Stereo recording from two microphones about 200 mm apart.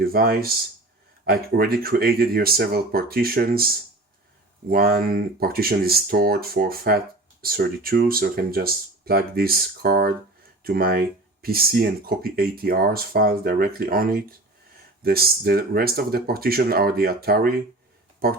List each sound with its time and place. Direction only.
0.0 s speech: 50° right (ahead or behind)